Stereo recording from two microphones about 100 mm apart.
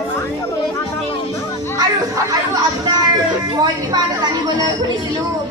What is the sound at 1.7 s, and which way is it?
Chatter, 35° right (ahead or behind).